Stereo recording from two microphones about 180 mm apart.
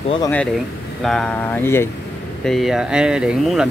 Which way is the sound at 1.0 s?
5° left (ahead or behind).